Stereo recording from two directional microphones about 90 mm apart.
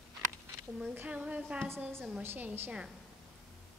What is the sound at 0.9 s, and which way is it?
A woman's voice, 15° right (ahead or behind).